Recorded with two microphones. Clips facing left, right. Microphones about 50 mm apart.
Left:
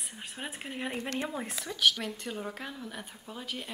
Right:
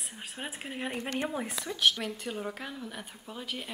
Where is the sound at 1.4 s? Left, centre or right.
Centre.